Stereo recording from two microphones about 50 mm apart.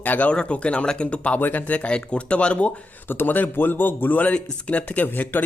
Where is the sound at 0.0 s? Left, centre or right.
Left.